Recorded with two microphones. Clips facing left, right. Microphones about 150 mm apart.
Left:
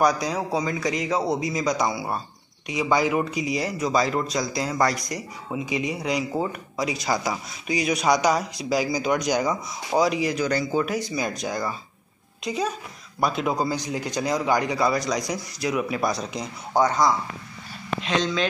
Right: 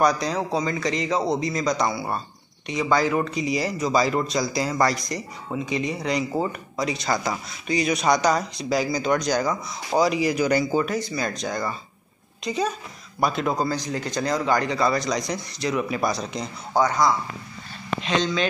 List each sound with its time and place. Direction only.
0.0 s speech: 5° left (ahead or behind)
9.8 s speech: centre (ahead or behind)
10.9 s speech: 15° left (ahead or behind)
16.7 s speech: 20° left (ahead or behind)
18.0 s speech: centre (ahead or behind)